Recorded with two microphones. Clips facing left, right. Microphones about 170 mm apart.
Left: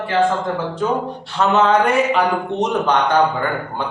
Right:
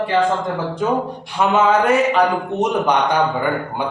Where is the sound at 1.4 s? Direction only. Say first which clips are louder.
Even; 10° right (ahead or behind).